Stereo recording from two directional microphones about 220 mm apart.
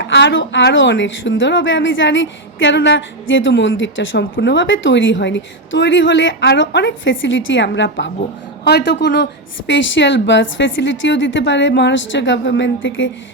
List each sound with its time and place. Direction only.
0.0 s a woman's voice: 55° left (ahead or behind)